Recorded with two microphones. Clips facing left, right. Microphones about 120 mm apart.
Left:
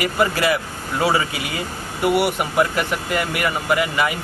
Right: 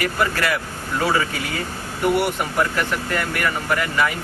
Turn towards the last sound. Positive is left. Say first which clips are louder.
# left 2 dB
turn(degrees=15)  # may be behind; listen again after turning